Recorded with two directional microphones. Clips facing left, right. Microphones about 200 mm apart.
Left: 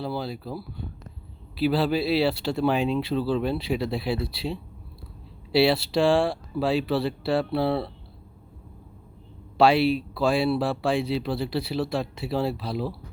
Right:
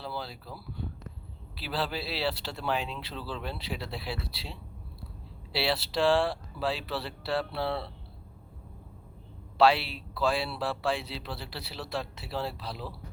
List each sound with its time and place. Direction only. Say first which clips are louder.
0.0 s speech: left 8 dB; 15° left (ahead or behind)
9.6 s speech: left 5 dB; 15° left (ahead or behind)